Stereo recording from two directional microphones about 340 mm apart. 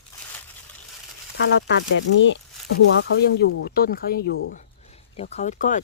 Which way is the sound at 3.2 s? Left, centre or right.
Left.